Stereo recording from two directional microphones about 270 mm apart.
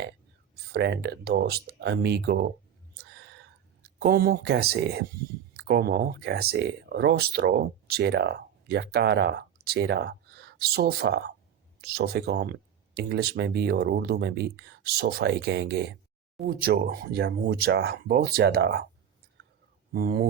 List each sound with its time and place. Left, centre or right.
0.5 s speech: right
3.0 s a sound: right
3.8 s speech: right
19.9 s speech: right